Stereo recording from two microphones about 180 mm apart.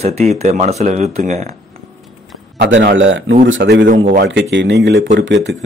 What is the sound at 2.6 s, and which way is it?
Speech, 70° right (ahead or behind).